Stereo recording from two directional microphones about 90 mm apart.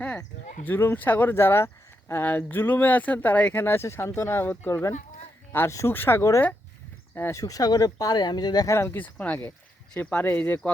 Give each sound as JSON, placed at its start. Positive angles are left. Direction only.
{"t": 0.7, "sound": "speech", "side_deg": 25}
{"t": 8.6, "sound": "speech", "side_deg": 30}
{"t": 9.1, "sound": "speech", "side_deg": 15}